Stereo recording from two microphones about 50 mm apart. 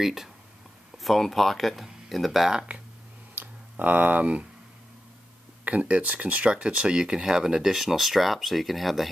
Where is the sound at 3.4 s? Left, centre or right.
Right.